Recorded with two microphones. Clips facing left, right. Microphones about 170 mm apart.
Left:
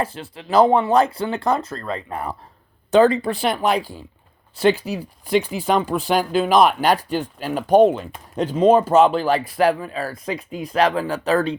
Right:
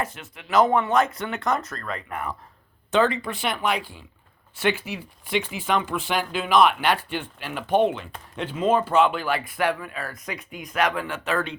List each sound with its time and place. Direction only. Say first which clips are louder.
0.0 s speech: left 5 dB; 30° left (ahead or behind)